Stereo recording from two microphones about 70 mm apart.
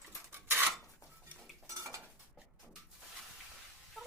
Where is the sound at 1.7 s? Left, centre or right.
Right.